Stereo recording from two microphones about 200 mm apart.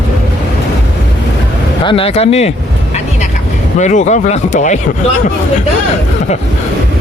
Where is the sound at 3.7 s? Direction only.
35° left (ahead or behind).